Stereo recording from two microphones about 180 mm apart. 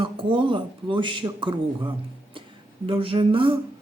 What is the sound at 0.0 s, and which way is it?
Speech, 30° right (ahead or behind).